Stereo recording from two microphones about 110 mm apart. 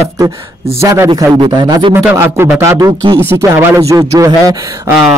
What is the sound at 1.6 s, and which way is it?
Speech, 45° right (ahead or behind).